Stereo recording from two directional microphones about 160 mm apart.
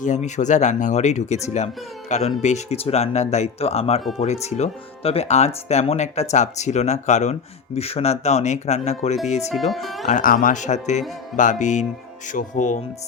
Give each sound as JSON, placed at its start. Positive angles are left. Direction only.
{"t": 0.0, "sound": "speech", "side_deg": 50}
{"t": 9.5, "sound": "speech", "side_deg": 0}
{"t": 10.1, "sound": "speech", "side_deg": 60}